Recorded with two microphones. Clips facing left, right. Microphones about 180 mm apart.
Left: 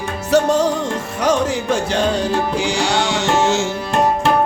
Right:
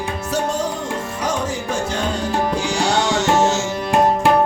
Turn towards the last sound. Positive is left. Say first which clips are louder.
# even
turn(degrees=60)  # may be behind; listen again after turning